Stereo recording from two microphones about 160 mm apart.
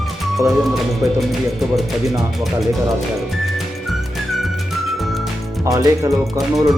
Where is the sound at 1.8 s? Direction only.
Centre (ahead or behind).